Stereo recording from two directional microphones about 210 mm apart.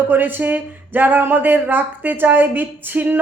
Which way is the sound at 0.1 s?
10° right (ahead or behind).